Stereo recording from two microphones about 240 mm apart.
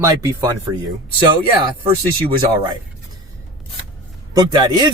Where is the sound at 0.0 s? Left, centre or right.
Centre.